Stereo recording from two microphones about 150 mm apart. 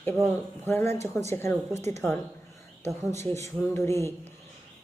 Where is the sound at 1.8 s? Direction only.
50° right (ahead or behind).